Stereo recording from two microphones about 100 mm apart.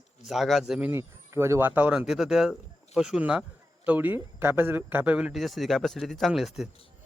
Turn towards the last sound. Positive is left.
turn(degrees=-5)  # may be behind; listen again after turning